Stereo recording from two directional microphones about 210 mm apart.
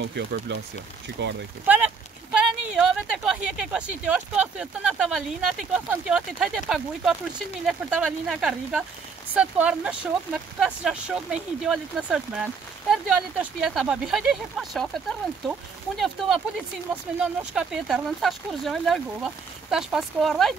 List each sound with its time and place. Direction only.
0.0 s speech: 50° right (ahead or behind)
2.3 s speech: 5° right (ahead or behind)